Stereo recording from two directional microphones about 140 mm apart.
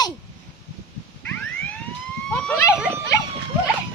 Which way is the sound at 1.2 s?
10° left (ahead or behind).